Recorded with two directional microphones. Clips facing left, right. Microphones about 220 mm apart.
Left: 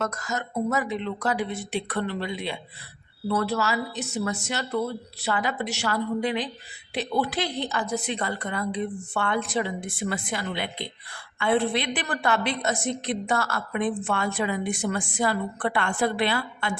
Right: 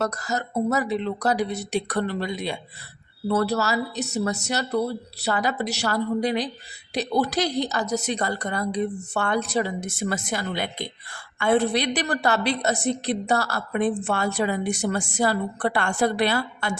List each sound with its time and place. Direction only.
0.0 s a woman's voice: 35° right (ahead or behind)